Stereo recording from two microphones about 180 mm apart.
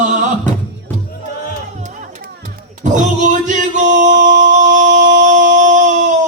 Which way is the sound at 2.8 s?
45° right (ahead or behind).